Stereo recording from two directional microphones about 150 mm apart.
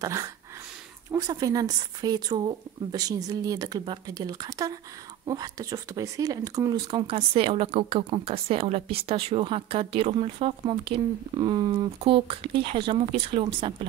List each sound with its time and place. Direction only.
0.0 s speech: 20° right (ahead or behind)
7.1 s speech: 40° right (ahead or behind)